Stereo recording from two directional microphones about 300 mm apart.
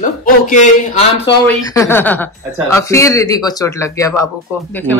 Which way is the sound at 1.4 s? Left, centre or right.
Centre.